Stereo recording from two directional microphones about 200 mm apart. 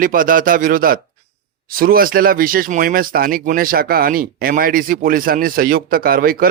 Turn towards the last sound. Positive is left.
turn(degrees=-45)  # may be behind; listen again after turning